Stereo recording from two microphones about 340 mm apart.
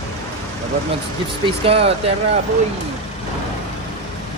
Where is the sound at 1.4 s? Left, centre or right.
Centre.